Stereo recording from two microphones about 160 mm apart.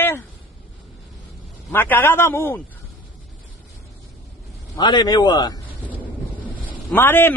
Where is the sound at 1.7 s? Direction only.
10° left (ahead or behind).